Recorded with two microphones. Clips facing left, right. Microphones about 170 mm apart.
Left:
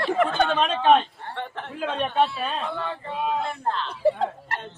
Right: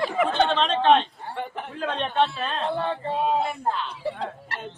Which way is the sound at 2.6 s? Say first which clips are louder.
Right 4 dB; 35° right (ahead or behind).